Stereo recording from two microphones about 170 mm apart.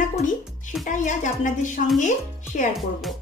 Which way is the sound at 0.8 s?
45° left (ahead or behind).